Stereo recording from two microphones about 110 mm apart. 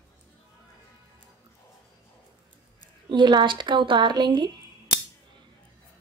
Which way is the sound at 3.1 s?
45° right (ahead or behind).